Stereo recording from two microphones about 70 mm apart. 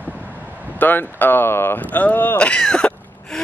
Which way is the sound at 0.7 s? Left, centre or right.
Left.